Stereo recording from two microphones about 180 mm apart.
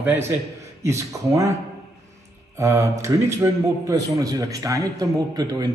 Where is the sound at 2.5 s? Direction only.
15° right (ahead or behind).